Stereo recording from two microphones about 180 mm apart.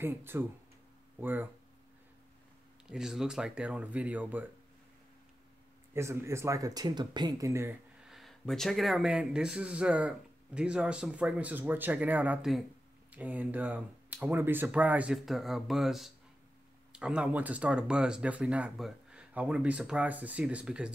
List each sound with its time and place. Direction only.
0.0 s speech: 10° right (ahead or behind)
2.9 s speech: 5° right (ahead or behind)
5.9 s speech: 15° right (ahead or behind)
8.0 s speech: centre (ahead or behind)